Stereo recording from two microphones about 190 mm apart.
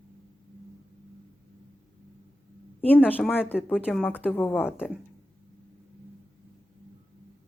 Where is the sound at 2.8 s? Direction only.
10° left (ahead or behind).